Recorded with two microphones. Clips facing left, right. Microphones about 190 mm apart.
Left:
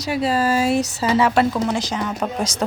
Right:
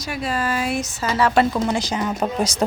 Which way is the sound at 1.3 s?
Centre (ahead or behind).